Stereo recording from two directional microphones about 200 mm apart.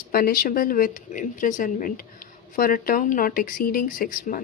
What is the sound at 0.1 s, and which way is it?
Speech, 45° left (ahead or behind).